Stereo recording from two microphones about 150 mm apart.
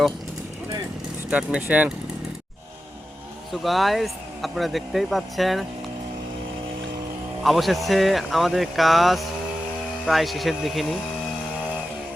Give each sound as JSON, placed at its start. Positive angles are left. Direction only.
{"t": 1.3, "sound": "speech", "side_deg": -10}
{"t": 3.5, "sound": "speech", "side_deg": 0}
{"t": 7.4, "sound": "speech", "side_deg": 0}